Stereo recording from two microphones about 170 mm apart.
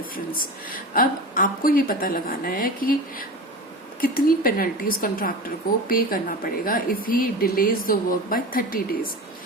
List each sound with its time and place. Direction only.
0.3 s speech: 55° left (ahead or behind)